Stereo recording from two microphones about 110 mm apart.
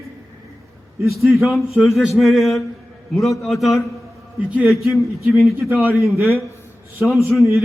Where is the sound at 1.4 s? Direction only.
Centre (ahead or behind).